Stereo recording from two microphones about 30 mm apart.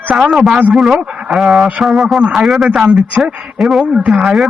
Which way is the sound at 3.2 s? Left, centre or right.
Right.